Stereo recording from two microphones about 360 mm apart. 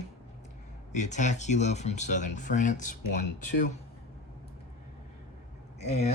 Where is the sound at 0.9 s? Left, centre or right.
Centre.